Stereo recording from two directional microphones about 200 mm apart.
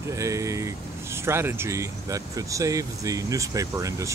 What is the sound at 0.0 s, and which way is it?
Speech, 15° right (ahead or behind).